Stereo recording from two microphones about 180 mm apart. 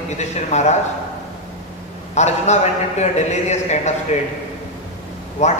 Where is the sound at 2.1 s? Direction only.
40° left (ahead or behind).